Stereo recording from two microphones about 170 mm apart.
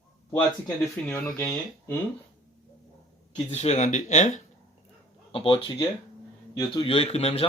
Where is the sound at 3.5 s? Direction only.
40° left (ahead or behind).